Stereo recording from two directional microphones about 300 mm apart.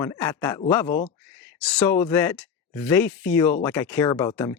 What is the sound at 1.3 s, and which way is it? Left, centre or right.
Speech, centre.